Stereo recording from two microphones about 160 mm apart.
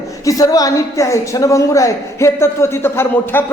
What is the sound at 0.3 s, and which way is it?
A woman's voice, 20° left (ahead or behind).